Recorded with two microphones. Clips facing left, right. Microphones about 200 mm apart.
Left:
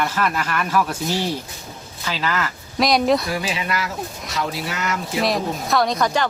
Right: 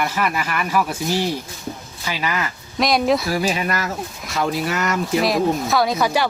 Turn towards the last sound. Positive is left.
turn(degrees=-10)  # may be behind; listen again after turning